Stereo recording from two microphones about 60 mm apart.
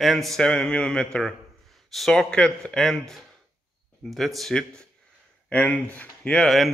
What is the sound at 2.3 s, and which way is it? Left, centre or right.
A man's voice, centre.